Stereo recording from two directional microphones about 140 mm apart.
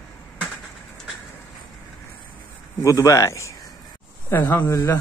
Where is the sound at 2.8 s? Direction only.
20° left (ahead or behind).